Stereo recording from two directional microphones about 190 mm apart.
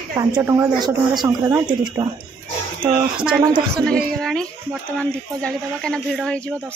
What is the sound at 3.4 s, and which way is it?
Speech, 20° right (ahead or behind).